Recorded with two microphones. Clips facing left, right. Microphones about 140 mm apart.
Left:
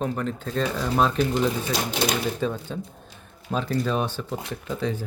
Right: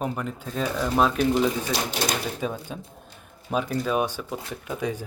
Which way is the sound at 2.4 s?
10° right (ahead or behind).